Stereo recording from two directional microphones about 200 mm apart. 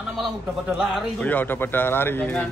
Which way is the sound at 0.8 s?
Centre (ahead or behind).